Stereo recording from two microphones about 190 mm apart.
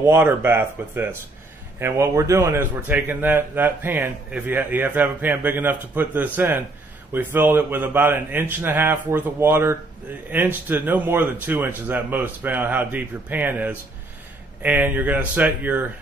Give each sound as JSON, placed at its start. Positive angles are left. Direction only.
{"t": 0.0, "sound": "a man's voice", "side_deg": -10}